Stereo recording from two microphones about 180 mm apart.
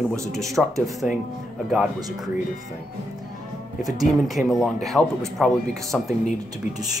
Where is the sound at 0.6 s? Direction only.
Centre (ahead or behind).